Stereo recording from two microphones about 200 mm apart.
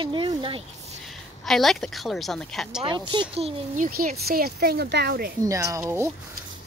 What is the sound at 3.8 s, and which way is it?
Speech, 45° right (ahead or behind).